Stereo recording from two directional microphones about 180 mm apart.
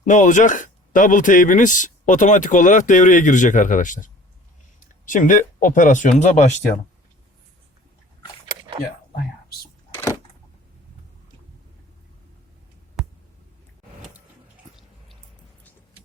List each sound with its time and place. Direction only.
0.0 s speech: 45° left (ahead or behind)
9.9 s power windows: 15° left (ahead or behind)
13.0 s a sound: 5° right (ahead or behind)